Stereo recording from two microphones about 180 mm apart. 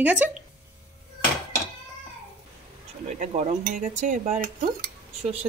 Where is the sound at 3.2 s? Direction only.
45° right (ahead or behind).